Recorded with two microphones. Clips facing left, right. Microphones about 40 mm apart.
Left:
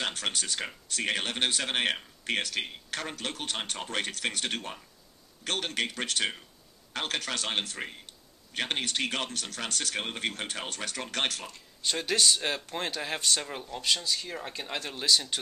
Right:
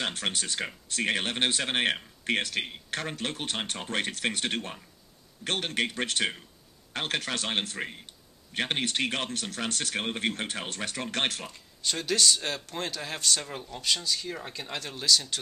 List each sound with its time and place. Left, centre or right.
0.2 s speech: right
7.8 s speech: centre; by 11.4 s right
11.8 s a man's voice: centre